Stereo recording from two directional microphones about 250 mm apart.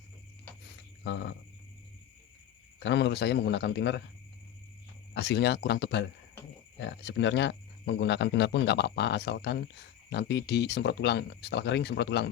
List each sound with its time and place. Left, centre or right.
1.0 s speech: left
2.8 s speech: left
5.1 s speech: left